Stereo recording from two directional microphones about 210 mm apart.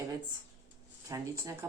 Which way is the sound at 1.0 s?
15° right (ahead or behind).